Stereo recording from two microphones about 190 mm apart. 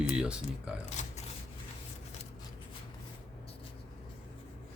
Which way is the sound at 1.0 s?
40° left (ahead or behind).